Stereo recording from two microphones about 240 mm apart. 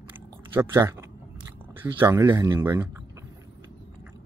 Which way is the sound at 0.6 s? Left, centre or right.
Centre.